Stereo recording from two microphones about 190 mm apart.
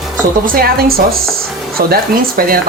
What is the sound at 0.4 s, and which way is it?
Speech, 50° right (ahead or behind).